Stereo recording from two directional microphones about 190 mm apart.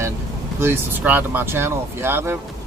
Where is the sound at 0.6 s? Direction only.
10° right (ahead or behind).